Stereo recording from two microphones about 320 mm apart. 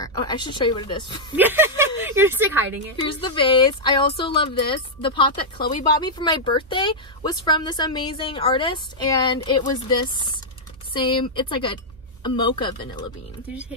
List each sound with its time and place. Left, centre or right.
0.0 s speech: centre
1.3 s a woman's voice: centre
3.0 s speech: centre